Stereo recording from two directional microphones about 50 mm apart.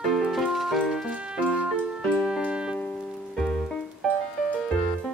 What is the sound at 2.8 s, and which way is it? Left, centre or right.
Music, centre.